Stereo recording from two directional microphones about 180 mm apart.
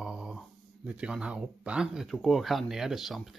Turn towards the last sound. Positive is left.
turn(degrees=0)  # may be behind; listen again after turning